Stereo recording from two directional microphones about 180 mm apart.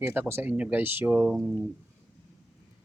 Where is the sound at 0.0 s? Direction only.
15° right (ahead or behind).